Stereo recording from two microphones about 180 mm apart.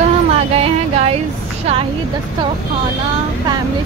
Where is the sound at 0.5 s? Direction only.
35° right (ahead or behind).